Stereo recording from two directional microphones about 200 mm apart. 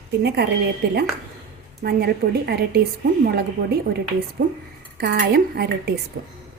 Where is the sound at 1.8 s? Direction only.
55° right (ahead or behind).